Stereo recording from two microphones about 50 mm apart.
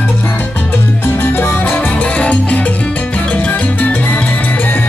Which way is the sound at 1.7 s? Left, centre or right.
Left.